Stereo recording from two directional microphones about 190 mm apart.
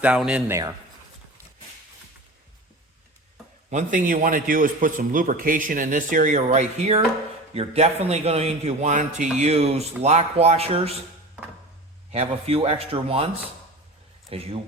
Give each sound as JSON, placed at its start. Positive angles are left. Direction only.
{"t": 0.0, "sound": "a man's voice", "side_deg": -5}
{"t": 3.7, "sound": "a man's voice", "side_deg": -40}
{"t": 12.1, "sound": "a man's voice", "side_deg": -30}